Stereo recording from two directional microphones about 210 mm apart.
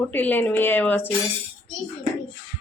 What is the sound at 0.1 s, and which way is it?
Speech, 10° left (ahead or behind).